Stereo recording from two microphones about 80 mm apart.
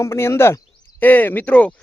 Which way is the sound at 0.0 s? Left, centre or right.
Left.